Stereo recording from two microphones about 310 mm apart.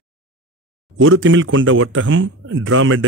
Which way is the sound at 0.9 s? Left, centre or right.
Right.